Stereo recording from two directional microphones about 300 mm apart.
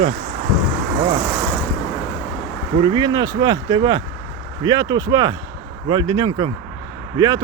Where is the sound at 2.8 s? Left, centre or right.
Centre.